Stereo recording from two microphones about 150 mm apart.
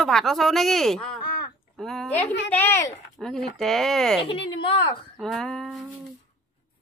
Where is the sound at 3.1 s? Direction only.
5° left (ahead or behind).